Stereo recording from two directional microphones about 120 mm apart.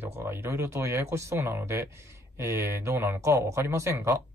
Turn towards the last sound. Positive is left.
turn(degrees=-25)  # may be behind; listen again after turning